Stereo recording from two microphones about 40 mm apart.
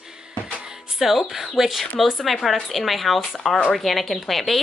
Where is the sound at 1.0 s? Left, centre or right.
Centre.